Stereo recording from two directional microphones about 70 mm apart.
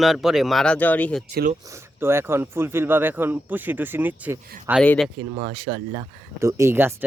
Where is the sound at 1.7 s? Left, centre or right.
Right.